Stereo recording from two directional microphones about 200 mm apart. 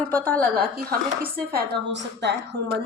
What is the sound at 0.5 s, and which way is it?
A woman's voice, 45° right (ahead or behind).